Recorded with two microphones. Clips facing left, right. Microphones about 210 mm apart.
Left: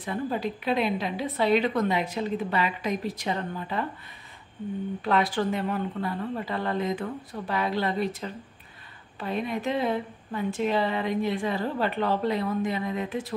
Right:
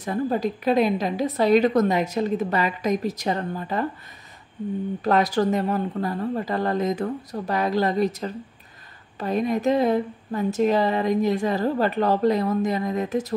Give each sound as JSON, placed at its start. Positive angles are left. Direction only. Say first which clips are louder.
{"t": 0.0, "sound": "speech", "louder": "right 5 dB", "side_deg": -40}
{"t": 5.0, "sound": "speech", "louder": "right 5 dB", "side_deg": -40}